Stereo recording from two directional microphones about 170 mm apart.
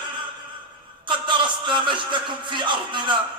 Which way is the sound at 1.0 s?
30° right (ahead or behind).